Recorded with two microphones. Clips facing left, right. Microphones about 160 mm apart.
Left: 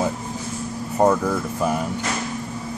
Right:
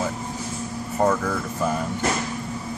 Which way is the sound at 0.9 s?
15° left (ahead or behind).